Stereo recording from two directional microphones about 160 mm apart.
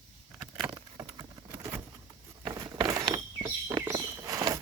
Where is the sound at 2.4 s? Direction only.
25° right (ahead or behind).